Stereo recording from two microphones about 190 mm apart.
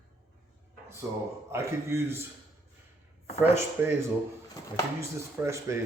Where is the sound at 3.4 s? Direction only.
10° right (ahead or behind).